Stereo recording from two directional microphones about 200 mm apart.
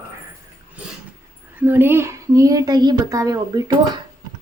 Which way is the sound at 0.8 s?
5° right (ahead or behind).